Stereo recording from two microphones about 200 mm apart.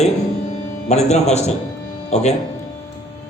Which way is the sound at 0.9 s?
35° left (ahead or behind).